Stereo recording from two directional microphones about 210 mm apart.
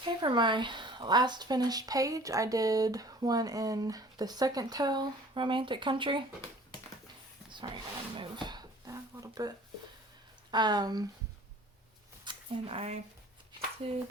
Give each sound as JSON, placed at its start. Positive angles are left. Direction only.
{"t": 0.0, "sound": "speech", "side_deg": -20}
{"t": 7.5, "sound": "speech", "side_deg": -25}
{"t": 10.5, "sound": "speech", "side_deg": -20}
{"t": 12.2, "sound": "a sound", "side_deg": -25}
{"t": 13.8, "sound": "speech", "side_deg": -25}